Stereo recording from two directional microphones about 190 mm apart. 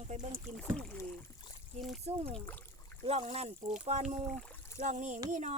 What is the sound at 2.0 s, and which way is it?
Speech, 30° right (ahead or behind).